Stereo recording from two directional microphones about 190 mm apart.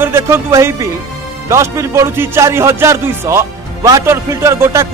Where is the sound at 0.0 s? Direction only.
15° right (ahead or behind).